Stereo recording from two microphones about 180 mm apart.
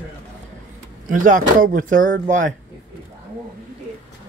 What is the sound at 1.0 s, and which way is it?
Speech, 45° right (ahead or behind).